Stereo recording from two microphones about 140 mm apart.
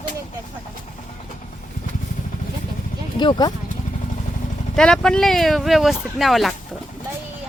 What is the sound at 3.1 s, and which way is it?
Speech, 30° left (ahead or behind).